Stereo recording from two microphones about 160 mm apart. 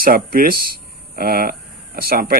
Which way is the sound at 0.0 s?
65° right (ahead or behind).